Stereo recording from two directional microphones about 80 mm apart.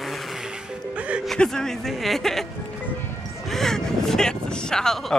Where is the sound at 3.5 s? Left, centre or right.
Centre.